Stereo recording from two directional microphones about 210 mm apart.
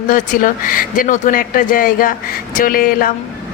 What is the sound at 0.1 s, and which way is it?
A woman's voice, 40° left (ahead or behind).